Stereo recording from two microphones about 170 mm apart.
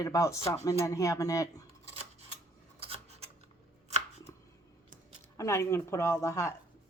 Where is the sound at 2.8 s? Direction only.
35° right (ahead or behind).